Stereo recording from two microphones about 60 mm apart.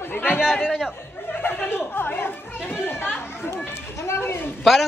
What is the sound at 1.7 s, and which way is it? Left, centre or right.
Speech, left.